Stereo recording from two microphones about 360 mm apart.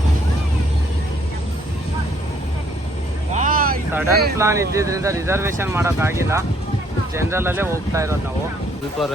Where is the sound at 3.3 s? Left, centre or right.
Right.